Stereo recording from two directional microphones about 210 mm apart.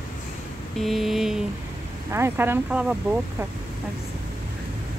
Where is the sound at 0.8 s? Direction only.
Centre (ahead or behind).